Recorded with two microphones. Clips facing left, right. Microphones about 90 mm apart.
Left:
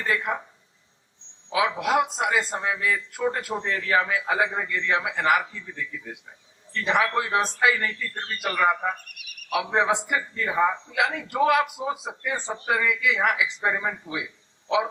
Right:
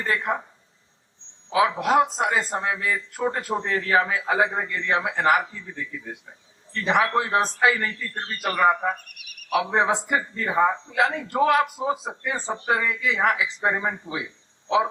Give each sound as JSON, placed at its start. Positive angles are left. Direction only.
{"t": 0.1, "sound": "a man's voice", "side_deg": -35}
{"t": 1.5, "sound": "a man's voice", "side_deg": -35}
{"t": 6.8, "sound": "a man's voice", "side_deg": -35}
{"t": 9.0, "sound": "a sound", "side_deg": 0}
{"t": 9.6, "sound": "a man's voice", "side_deg": -35}